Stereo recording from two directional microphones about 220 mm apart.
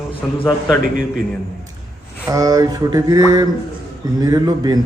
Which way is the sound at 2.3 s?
15° right (ahead or behind).